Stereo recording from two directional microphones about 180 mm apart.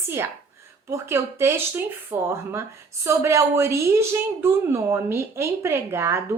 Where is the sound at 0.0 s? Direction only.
15° right (ahead or behind).